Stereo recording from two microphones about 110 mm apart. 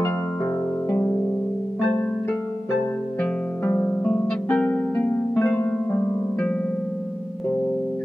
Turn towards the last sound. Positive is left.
turn(degrees=10)  # may be behind; listen again after turning